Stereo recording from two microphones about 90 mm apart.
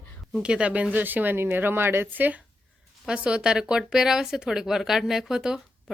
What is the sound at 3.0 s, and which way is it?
Speech, 10° right (ahead or behind).